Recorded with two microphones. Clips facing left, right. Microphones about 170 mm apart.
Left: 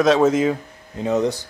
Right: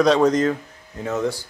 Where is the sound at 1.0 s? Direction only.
20° left (ahead or behind).